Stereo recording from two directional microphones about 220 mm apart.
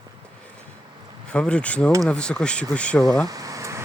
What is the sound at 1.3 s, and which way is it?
Speech, 5° left (ahead or behind).